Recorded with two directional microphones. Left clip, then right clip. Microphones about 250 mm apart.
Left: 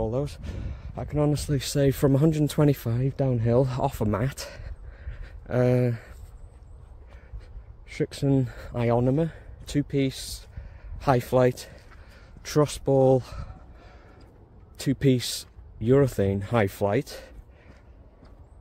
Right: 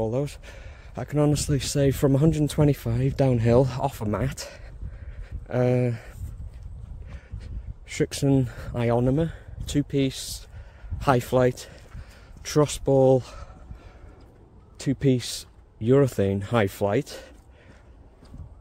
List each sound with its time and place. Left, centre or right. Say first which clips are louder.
0.0 s speech: right 2 dB; centre
3.0 s speech: right 4 dB; centre
3.6 s speech: left 1 dB; centre
7.9 s speech: right 2 dB; centre
14.8 s speech: even; centre